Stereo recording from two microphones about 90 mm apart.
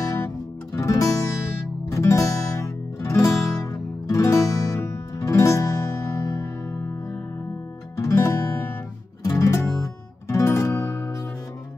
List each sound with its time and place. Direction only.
0.7 s music: 35° left (ahead or behind)
8.0 s music: 35° left (ahead or behind)